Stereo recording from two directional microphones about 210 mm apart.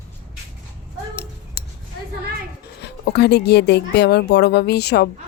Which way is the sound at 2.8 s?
50° left (ahead or behind).